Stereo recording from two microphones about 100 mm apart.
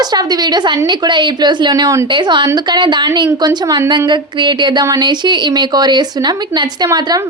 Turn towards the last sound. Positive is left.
turn(degrees=-45)  # may be behind; listen again after turning